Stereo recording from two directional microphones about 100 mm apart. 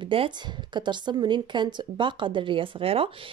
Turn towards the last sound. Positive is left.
turn(degrees=-70)  # may be behind; listen again after turning